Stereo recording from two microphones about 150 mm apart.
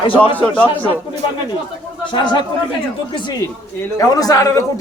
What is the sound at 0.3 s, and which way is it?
Speech, 10° left (ahead or behind).